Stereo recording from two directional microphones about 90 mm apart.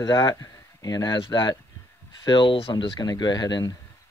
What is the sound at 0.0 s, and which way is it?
Speech, 50° left (ahead or behind).